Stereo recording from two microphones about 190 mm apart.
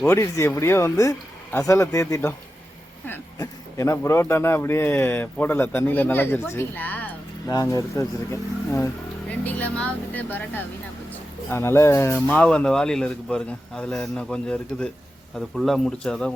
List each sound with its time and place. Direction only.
0.0 s a man's voice: 15° left (ahead or behind)